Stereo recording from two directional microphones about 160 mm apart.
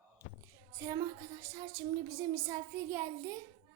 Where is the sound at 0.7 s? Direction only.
20° right (ahead or behind).